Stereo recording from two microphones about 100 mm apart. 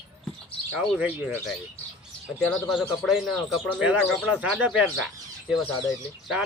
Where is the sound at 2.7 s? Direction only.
5° right (ahead or behind).